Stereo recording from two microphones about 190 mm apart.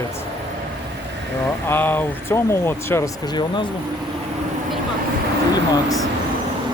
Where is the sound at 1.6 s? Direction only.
10° left (ahead or behind).